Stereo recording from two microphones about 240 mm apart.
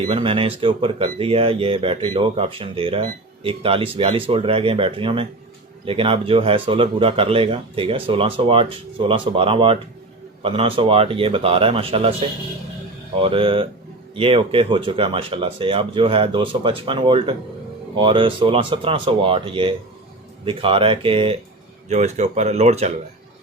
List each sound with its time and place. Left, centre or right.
0.1 s speech: right